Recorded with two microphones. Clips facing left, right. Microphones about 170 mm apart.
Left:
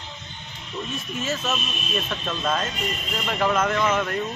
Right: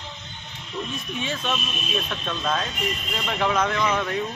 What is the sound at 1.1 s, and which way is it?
A man's voice, 5° left (ahead or behind).